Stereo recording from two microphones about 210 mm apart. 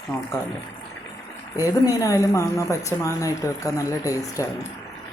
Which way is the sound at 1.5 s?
15° left (ahead or behind).